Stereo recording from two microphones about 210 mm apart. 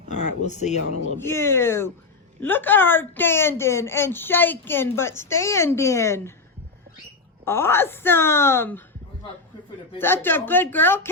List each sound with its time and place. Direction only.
0.1 s speech: 35° left (ahead or behind)
1.2 s speech: 10° left (ahead or behind)
7.4 s speech: 10° left (ahead or behind)
10.0 s speech: 10° left (ahead or behind)